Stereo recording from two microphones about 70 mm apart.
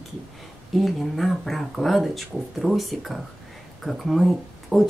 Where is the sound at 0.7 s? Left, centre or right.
Centre.